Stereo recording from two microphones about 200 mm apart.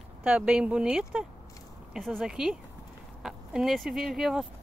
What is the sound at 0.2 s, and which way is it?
Speech, 5° right (ahead or behind).